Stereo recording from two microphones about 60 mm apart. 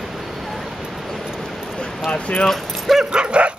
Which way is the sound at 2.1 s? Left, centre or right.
Centre.